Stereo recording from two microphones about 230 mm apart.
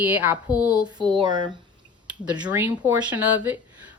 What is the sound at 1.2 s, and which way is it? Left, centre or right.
Speech, centre.